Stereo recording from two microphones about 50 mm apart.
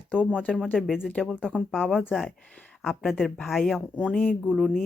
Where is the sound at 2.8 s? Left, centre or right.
Centre.